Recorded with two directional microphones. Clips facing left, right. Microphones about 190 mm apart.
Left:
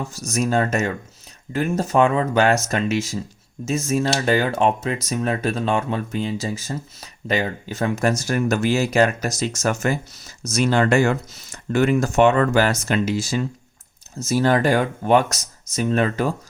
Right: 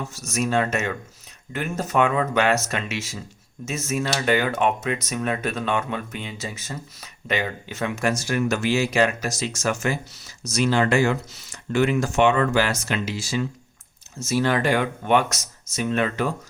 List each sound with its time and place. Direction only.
0.1 s speech: 40° left (ahead or behind)